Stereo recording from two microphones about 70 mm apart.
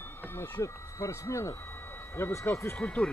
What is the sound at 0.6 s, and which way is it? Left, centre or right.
Speech, left.